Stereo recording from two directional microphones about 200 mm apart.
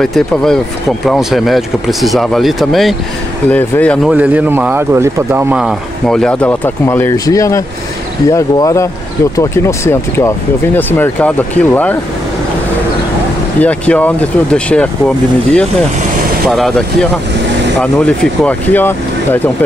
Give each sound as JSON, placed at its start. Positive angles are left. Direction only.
{"t": 0.0, "sound": "speech", "side_deg": 5}
{"t": 4.1, "sound": "speech", "side_deg": -5}
{"t": 13.6, "sound": "speech", "side_deg": 5}